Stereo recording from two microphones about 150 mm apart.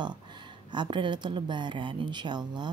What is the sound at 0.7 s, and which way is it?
Speech, 30° right (ahead or behind).